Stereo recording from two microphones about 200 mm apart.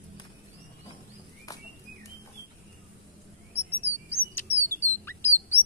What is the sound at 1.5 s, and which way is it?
Bird, 20° left (ahead or behind).